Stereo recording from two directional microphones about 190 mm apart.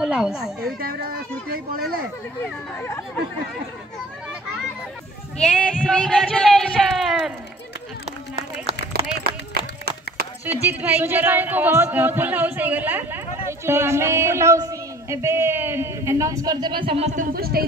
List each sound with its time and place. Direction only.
0.0 s a woman's voice: 5° right (ahead or behind)
1.5 s speech: 50° right (ahead or behind)
5.4 s a man's voice: 5° left (ahead or behind)
9.2 s run: 55° right (ahead or behind)
10.4 s speech: 10° right (ahead or behind); by 17.6 s 55° right (ahead or behind)